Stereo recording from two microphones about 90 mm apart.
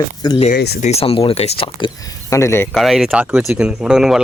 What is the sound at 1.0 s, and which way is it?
Speech, 90° left.